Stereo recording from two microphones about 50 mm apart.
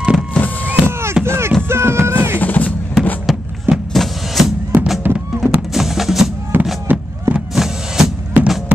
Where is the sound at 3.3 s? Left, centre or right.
Centre.